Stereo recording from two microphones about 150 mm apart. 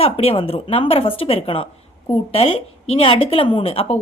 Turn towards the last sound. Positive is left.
turn(degrees=40)  # may be behind; listen again after turning